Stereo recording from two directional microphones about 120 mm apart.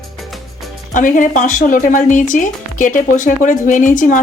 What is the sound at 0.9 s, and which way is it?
Speech, 90° left.